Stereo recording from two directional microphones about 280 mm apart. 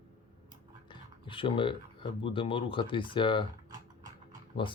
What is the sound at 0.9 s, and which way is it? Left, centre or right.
Speech, centre.